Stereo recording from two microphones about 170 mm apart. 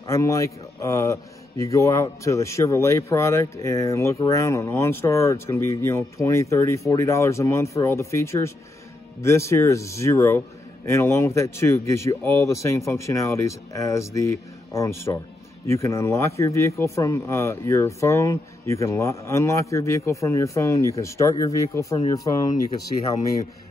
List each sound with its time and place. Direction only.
0.1 s a man's voice: 20° left (ahead or behind)